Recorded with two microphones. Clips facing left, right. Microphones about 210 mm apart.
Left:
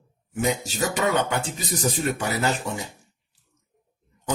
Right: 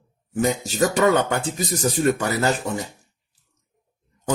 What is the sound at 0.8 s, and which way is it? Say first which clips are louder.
Speech: right 7 dB; 45° right (ahead or behind).